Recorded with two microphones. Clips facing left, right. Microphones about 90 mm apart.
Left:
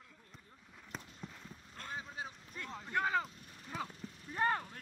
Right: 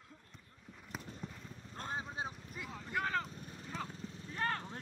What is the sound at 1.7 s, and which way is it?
Vehicle, 30° right (ahead or behind).